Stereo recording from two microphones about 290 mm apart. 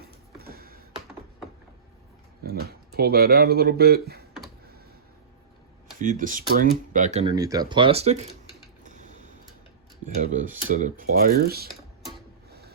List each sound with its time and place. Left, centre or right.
0.3 s a sound: right
2.4 s speech: right
6.0 s speech: right
10.2 s speech: right
12.5 s printer: right